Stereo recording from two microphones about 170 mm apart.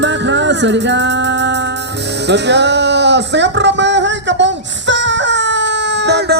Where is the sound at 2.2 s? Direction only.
90° right.